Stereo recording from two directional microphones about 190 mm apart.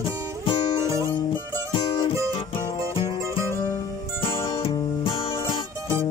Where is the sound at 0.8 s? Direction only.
15° right (ahead or behind).